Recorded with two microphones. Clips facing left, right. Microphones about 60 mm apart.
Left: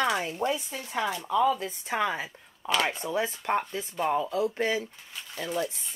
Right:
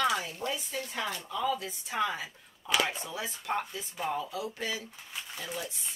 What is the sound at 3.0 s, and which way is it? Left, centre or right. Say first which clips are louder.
Speech: left 7 dB; left.